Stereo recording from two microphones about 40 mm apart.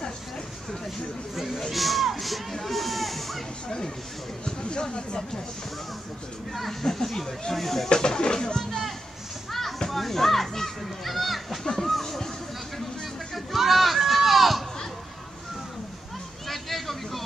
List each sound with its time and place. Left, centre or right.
1.3 s speech: centre
4.5 s speech: centre
6.5 s speech: centre
7.9 s speech: centre
9.5 s children playing: centre
9.8 s speech: centre
11.6 s a sound: centre
13.6 s a sound: centre
16.4 s vehicle: centre